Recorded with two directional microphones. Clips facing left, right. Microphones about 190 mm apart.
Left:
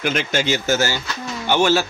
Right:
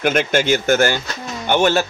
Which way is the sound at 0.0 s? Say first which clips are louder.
Right 4 dB; 55° right (ahead or behind).